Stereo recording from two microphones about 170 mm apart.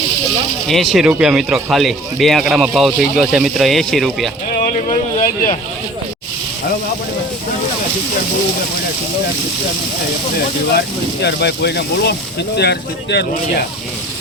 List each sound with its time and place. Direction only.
0.7 s speech: centre (ahead or behind)
4.8 s a sound: 50° left (ahead or behind)
10.8 s speech: 75° left (ahead or behind)